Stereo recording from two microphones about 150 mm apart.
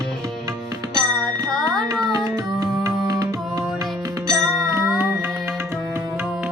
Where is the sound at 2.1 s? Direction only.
20° right (ahead or behind).